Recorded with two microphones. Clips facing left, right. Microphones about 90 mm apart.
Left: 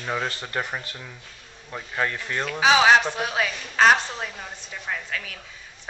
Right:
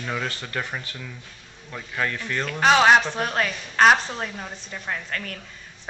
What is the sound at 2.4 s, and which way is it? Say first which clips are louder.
A woman's voice: right 1 dB; 5° left (ahead or behind).